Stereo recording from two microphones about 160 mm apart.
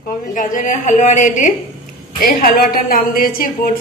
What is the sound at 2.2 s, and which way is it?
A woman's voice, 65° left (ahead or behind).